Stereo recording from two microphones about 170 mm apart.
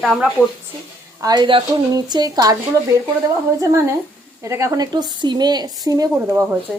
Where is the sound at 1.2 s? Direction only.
25° right (ahead or behind).